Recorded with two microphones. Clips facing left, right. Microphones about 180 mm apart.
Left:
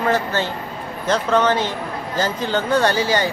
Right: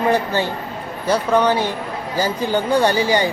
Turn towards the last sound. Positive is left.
turn(degrees=-15)  # may be behind; listen again after turning